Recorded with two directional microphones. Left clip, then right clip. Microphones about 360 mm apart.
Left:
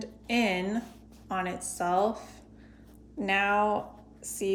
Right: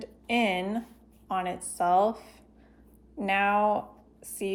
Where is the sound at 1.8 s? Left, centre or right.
Centre.